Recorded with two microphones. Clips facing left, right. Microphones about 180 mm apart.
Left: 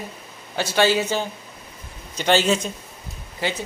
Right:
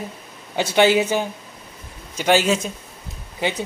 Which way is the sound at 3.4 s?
20° right (ahead or behind).